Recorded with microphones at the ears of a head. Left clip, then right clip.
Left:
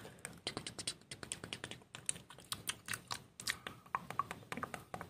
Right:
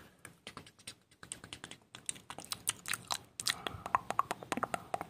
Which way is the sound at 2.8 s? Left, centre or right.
Right.